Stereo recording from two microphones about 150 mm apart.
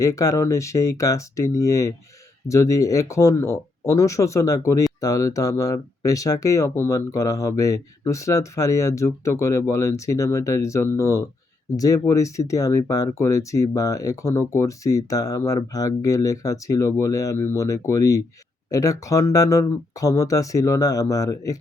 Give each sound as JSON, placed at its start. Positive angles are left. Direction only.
{"t": 0.0, "sound": "speech", "side_deg": 20}